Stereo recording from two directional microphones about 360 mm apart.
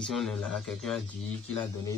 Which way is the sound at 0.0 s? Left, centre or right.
Centre.